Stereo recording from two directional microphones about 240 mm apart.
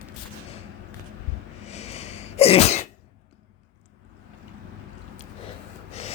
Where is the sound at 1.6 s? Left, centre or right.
Left.